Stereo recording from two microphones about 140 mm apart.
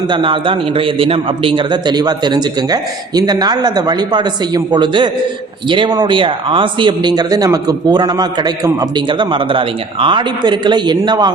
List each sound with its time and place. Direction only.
0.1 s speech: 35° right (ahead or behind)